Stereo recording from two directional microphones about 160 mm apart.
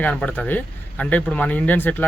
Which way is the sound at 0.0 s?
10° left (ahead or behind).